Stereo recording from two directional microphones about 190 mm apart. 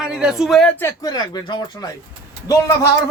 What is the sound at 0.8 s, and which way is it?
Speech, 15° left (ahead or behind).